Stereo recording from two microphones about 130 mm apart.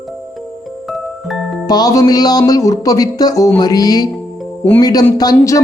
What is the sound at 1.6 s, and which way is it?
Speech, 30° left (ahead or behind).